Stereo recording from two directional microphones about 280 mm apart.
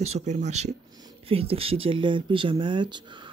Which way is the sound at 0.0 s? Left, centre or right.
Right.